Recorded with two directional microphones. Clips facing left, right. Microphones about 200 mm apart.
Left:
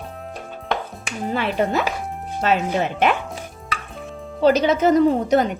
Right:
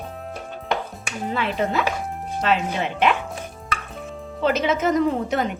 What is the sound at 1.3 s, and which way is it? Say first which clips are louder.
Speech: left 2 dB; 45° left (ahead or behind).